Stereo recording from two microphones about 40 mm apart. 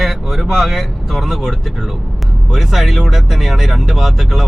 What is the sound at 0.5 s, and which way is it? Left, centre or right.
Speech, centre.